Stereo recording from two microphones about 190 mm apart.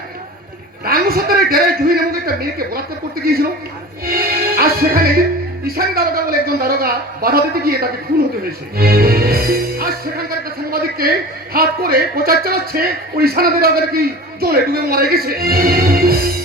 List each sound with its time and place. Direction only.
0.9 s a man's voice: 50° right (ahead or behind)
4.0 s music: 50° right (ahead or behind)
5.6 s speech: 55° right (ahead or behind)